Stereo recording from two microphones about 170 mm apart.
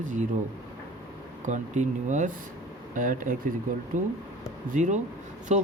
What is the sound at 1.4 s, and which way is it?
Speech, 45° right (ahead or behind).